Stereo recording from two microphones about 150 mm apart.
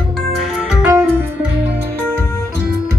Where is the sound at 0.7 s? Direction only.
5° right (ahead or behind).